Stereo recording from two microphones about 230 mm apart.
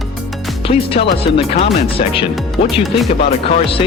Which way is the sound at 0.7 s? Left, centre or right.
Left.